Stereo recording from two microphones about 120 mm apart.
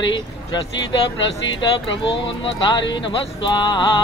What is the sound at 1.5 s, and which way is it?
Speech, 45° left (ahead or behind).